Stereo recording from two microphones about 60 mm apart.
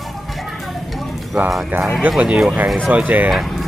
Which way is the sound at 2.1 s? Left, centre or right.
Centre.